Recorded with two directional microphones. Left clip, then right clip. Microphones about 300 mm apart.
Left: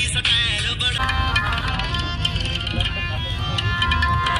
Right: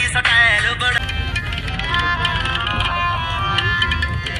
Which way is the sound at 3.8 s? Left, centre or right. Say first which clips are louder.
Left 1 dB; centre.